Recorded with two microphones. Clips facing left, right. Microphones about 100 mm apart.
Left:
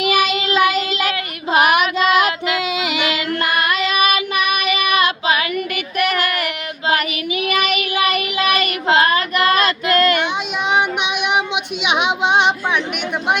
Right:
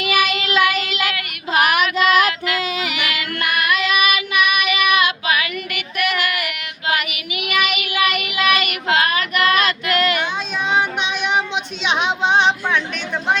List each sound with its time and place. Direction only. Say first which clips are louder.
0.0 s child singing: left 2 dB; 35° left (ahead or behind)
10.7 s child singing: left 2 dB; 15° left (ahead or behind)